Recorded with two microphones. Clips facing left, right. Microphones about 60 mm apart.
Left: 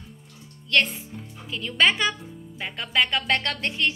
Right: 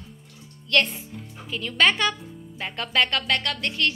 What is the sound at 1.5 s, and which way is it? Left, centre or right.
A woman's voice, centre.